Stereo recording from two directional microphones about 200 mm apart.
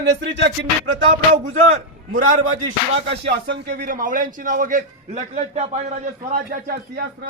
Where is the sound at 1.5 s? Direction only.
40° right (ahead or behind).